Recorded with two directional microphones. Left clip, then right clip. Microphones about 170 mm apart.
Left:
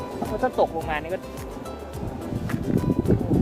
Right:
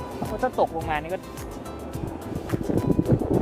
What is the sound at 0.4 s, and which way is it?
Speech, 30° right (ahead or behind).